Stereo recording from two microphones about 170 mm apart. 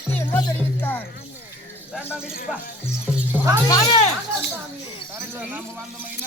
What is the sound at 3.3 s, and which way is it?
Music, 15° right (ahead or behind).